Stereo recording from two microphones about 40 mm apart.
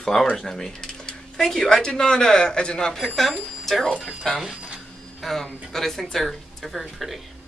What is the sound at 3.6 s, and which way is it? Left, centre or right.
Speech, centre.